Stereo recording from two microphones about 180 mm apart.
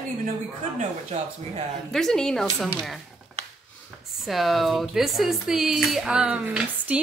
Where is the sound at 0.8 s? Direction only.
40° right (ahead or behind).